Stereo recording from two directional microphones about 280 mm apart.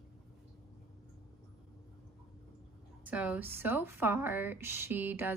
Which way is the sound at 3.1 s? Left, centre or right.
Centre.